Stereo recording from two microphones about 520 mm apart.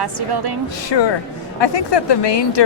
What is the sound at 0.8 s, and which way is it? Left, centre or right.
A woman's voice, left.